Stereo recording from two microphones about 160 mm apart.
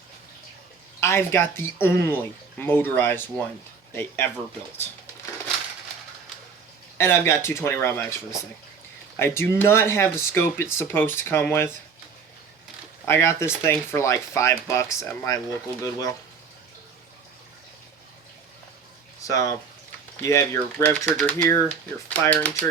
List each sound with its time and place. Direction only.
0.9 s speech: 15° left (ahead or behind)
7.0 s speech: 15° left (ahead or behind)
9.1 s speech: 15° left (ahead or behind)
13.1 s speech: 15° left (ahead or behind)
19.3 s speech: 20° left (ahead or behind)